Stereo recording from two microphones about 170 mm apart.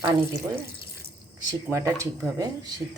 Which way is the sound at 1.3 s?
15° right (ahead or behind).